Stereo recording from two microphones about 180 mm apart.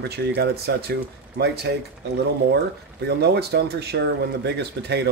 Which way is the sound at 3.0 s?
65° right (ahead or behind).